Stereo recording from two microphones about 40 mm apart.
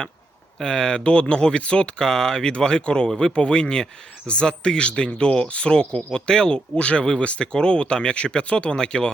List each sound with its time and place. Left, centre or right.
0.6 s speech: centre
2.0 s speech: centre